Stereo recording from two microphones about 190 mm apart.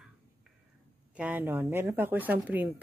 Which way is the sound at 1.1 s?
10° right (ahead or behind).